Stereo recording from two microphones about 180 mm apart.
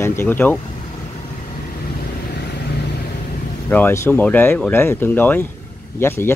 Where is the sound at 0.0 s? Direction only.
15° left (ahead or behind).